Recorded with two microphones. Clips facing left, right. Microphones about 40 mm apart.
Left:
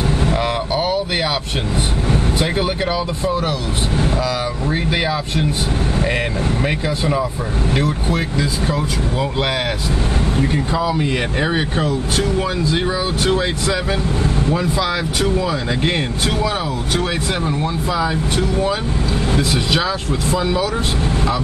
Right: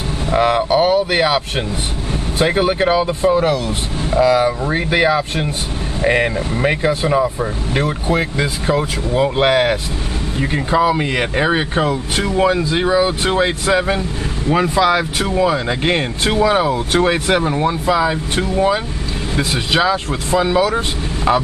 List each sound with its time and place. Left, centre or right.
0.3 s vehicle: right
2.3 s speech: right
11.9 s speech: right
12.4 s speech: right